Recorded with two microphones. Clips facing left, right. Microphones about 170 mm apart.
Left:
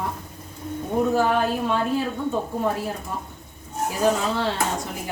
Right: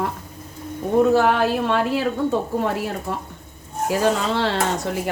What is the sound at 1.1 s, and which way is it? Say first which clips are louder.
Speech: right 3 dB; 75° right (ahead or behind).